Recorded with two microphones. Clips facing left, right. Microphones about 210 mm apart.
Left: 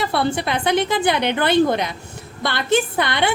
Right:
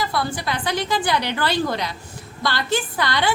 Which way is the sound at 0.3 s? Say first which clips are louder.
Left 5 dB; 25° left (ahead or behind).